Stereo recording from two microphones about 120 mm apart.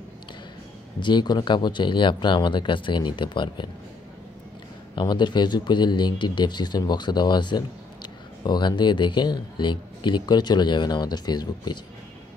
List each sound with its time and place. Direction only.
0.9 s speech: 40° left (ahead or behind)
4.9 s speech: 40° left (ahead or behind)